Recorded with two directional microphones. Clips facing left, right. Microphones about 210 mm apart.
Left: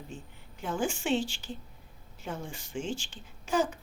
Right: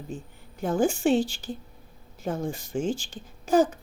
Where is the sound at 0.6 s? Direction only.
40° right (ahead or behind).